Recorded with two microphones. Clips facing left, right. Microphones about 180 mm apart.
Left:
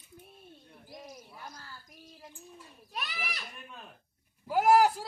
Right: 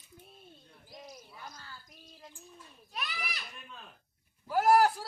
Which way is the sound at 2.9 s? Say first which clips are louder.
Left 1 dB; 45° left (ahead or behind).